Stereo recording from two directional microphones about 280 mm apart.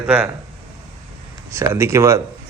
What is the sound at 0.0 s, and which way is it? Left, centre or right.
Speech, centre.